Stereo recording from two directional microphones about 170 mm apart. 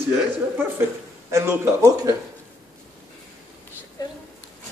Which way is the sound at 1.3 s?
15° right (ahead or behind).